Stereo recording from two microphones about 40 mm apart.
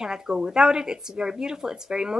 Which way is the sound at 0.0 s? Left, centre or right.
Centre.